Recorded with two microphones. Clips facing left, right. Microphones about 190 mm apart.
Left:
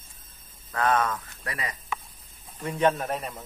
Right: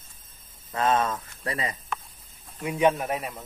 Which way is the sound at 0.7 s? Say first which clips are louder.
Right 1 dB; 25° right (ahead or behind).